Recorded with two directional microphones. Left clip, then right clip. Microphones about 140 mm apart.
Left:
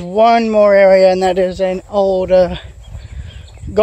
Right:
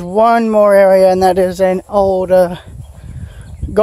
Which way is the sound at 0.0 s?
40° right (ahead or behind).